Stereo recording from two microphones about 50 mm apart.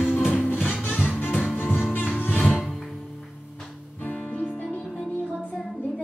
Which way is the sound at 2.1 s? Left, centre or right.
Left.